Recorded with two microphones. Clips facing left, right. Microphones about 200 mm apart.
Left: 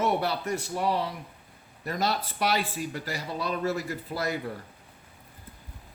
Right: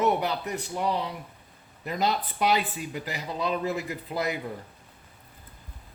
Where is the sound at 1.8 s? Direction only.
15° right (ahead or behind).